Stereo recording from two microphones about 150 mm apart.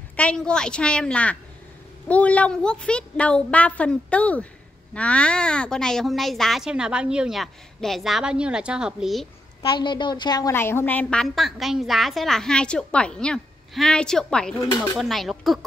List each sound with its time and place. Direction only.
0.1 s a woman's voice: 5° left (ahead or behind)
9.6 s a woman's voice: 30° left (ahead or behind)
10.5 s speech: 15° left (ahead or behind)